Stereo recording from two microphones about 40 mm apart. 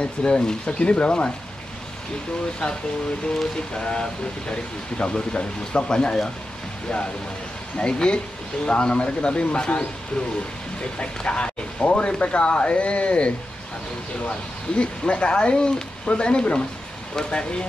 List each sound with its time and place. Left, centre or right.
0.0 s speech: centre
2.6 s speech: centre
7.7 s speech: left
11.0 s speech: left
14.8 s speech: left